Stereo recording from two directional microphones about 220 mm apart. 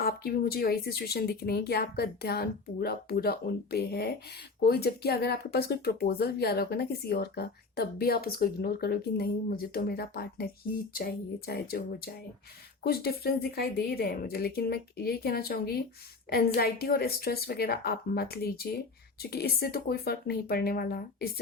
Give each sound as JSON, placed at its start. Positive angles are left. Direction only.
{"t": 0.0, "sound": "speech", "side_deg": 45}